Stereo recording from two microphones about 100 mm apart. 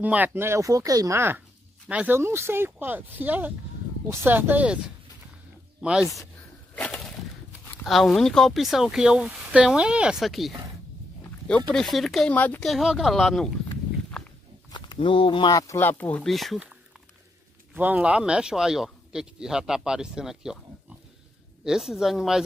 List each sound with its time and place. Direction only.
0.0 s speech: 15° right (ahead or behind)
1.9 s speech: 15° right (ahead or behind)
2.1 s speech: 25° right (ahead or behind); by 6.2 s 5° right (ahead or behind)
6.7 s a sound: 15° left (ahead or behind)
7.8 s speech: centre (ahead or behind)
11.7 s speech: 5° left (ahead or behind)
12.3 s speech: 15° left (ahead or behind)
12.6 s speech: centre (ahead or behind)
15.0 s speech: 60° left (ahead or behind)
15.5 s speech: 35° left (ahead or behind)
15.8 s speech: 15° left (ahead or behind)
16.3 s speech: centre (ahead or behind)
17.7 s speech: 15° right (ahead or behind)
21.6 s speech: 5° right (ahead or behind)